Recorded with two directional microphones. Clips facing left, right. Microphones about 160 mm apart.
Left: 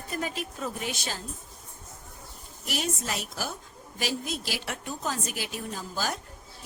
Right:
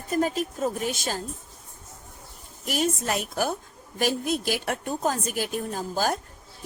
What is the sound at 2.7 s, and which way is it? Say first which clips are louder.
A woman's voice: right 6 dB; 50° right (ahead or behind).